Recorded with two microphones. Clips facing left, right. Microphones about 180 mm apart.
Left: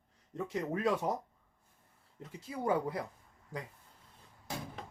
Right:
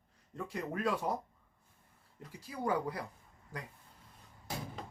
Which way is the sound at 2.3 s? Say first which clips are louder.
Left 2 dB; 25° left (ahead or behind).